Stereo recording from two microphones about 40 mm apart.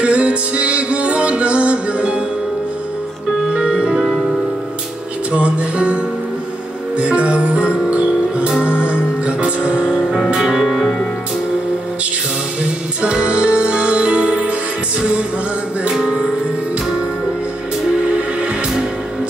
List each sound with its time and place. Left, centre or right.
0.0 s music: right
3.5 s music: right
4.0 s music: centre
5.3 s music: right
7.0 s music: right
10.6 s music: centre
13.0 s music: right
15.9 s music: centre